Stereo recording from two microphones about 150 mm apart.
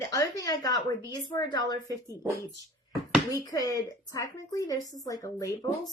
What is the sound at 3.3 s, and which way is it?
Speech, 25° left (ahead or behind).